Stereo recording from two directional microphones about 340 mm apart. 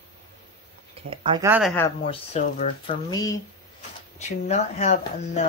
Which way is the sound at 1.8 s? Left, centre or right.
Centre.